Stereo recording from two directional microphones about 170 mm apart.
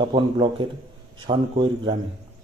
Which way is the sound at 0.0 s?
30° right (ahead or behind).